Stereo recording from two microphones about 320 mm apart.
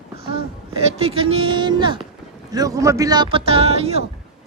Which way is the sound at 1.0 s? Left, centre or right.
Centre.